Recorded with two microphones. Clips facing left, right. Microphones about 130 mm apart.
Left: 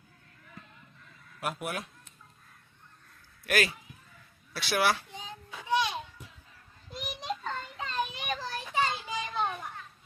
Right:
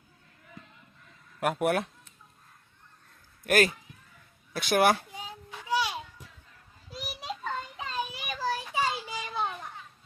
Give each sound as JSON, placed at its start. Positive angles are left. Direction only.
{"t": 1.4, "sound": "speech", "side_deg": -55}
{"t": 3.4, "sound": "speech", "side_deg": -45}
{"t": 5.1, "sound": "child singing", "side_deg": -10}
{"t": 6.9, "sound": "a sound", "side_deg": -5}
{"t": 8.4, "sound": "children playing", "side_deg": -10}